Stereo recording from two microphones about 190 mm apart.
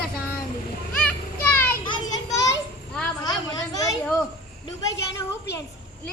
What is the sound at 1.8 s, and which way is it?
Children playing, 20° left (ahead or behind).